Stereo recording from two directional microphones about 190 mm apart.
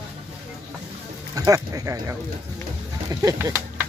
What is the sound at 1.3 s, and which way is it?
Speech, 20° right (ahead or behind).